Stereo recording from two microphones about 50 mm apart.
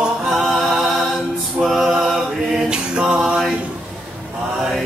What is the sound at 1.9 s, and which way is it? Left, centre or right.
Mantra, centre.